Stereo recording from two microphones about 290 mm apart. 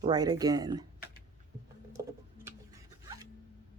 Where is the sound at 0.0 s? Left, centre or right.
Centre.